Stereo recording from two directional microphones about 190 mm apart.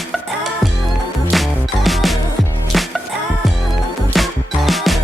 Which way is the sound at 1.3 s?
Centre (ahead or behind).